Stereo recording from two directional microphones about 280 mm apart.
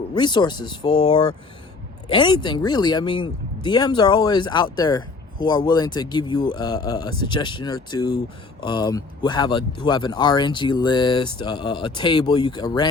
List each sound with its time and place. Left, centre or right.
0.1 s speech: centre